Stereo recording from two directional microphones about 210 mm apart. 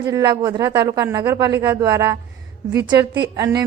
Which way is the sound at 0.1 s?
15° right (ahead or behind).